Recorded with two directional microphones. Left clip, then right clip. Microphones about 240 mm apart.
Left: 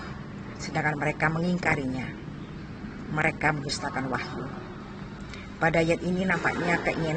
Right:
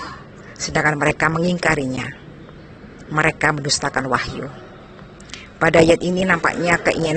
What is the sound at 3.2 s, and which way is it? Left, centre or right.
Speech, right.